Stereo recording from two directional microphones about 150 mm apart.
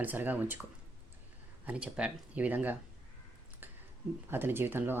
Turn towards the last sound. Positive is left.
turn(degrees=-15)  # may be behind; listen again after turning